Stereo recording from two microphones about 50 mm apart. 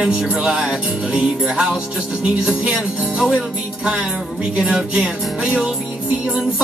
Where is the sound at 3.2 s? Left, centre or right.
Centre.